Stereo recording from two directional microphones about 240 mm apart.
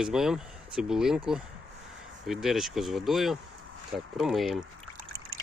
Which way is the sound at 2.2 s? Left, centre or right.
Centre.